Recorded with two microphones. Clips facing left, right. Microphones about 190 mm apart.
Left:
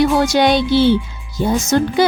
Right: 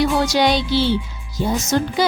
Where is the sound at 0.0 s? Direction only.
55° left (ahead or behind).